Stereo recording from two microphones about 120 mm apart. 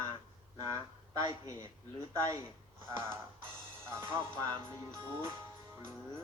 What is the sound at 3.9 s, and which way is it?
Speech, 20° right (ahead or behind).